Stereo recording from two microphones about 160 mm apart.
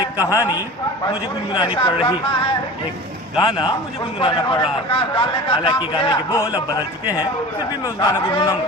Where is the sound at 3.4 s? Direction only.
30° left (ahead or behind).